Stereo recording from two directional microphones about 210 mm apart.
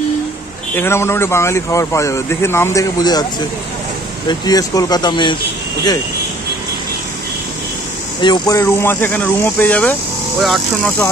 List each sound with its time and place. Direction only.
0.7 s speech: 10° left (ahead or behind)
8.2 s speech: 20° left (ahead or behind); by 11.1 s 5° left (ahead or behind)